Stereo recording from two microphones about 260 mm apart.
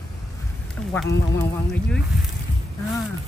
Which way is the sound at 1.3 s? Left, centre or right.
Centre.